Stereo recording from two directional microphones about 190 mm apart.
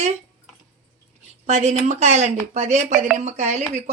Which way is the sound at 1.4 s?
35° right (ahead or behind).